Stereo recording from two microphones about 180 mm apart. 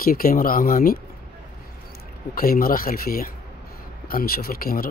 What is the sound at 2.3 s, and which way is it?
Speech, 55° left (ahead or behind).